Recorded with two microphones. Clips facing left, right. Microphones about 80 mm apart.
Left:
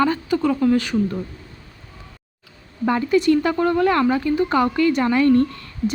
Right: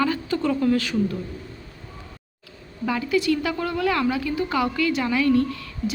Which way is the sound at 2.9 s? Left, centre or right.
Left.